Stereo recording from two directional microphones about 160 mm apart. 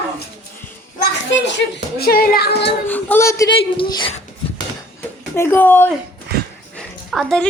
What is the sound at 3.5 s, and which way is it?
Speech, 30° left (ahead or behind).